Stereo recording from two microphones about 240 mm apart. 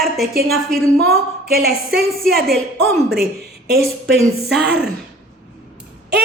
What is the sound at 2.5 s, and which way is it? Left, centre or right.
Speech, centre.